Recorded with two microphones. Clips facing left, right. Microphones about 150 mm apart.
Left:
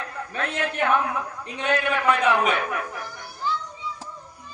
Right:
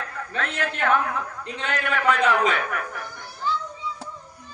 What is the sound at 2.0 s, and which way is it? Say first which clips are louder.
Speech: right 1 dB; 20° left (ahead or behind).